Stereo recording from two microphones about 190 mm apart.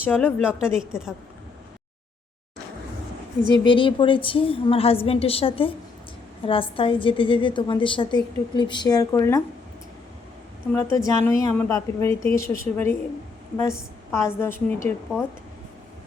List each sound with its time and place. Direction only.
0.0 s a woman's voice: 10° left (ahead or behind)
0.4 s a woman's voice: 5° right (ahead or behind)
3.5 s a woman's voice: 25° left (ahead or behind)
10.7 s a woman's voice: 15° left (ahead or behind)
14.1 s a woman's voice: 15° left (ahead or behind)